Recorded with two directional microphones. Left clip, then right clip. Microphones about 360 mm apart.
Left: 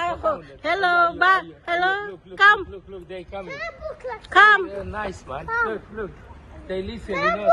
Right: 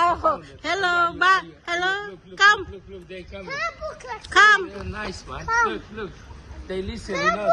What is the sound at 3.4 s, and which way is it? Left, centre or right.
Speech, centre.